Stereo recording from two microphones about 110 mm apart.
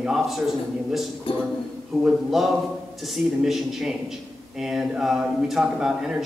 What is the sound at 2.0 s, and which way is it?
A man's voice, 5° right (ahead or behind).